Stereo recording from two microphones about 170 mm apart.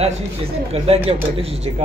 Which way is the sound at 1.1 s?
35° right (ahead or behind).